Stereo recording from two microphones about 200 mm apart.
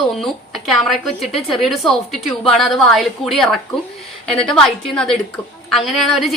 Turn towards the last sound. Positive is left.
turn(degrees=0)  # may be behind; listen again after turning